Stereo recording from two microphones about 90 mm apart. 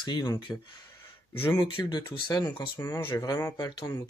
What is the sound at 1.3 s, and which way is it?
Speech, 25° left (ahead or behind).